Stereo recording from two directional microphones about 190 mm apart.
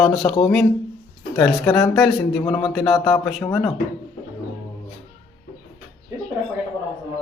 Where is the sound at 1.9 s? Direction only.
Centre (ahead or behind).